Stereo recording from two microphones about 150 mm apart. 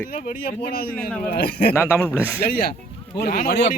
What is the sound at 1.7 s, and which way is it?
Speech, 15° left (ahead or behind).